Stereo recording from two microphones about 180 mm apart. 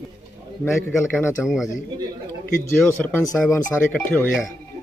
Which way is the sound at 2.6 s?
10° left (ahead or behind).